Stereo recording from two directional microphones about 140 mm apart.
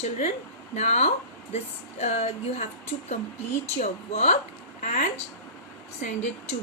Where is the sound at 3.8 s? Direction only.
50° left (ahead or behind).